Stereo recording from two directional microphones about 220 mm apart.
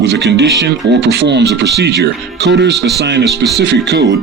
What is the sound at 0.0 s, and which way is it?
Speech, 50° right (ahead or behind).